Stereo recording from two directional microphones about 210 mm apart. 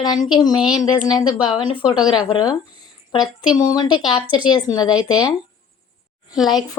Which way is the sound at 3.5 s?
20° left (ahead or behind).